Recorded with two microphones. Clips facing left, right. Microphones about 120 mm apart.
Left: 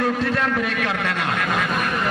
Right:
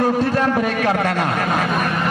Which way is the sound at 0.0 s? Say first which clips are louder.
Right 4 dB; 35° right (ahead or behind).